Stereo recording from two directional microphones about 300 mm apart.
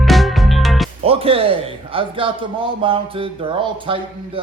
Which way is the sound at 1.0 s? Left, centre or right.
Centre.